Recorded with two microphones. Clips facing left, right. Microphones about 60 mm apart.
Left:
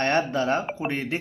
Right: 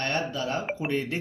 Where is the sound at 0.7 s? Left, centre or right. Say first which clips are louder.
Left 1 dB; left.